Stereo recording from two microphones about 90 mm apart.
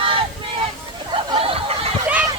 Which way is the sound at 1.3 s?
90° right.